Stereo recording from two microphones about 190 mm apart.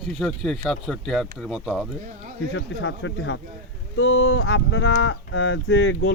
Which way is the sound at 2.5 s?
80° left.